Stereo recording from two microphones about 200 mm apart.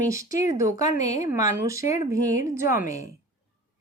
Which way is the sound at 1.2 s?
15° right (ahead or behind).